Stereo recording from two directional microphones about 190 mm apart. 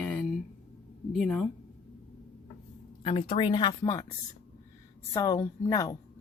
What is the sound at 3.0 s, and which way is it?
Speech, 35° left (ahead or behind).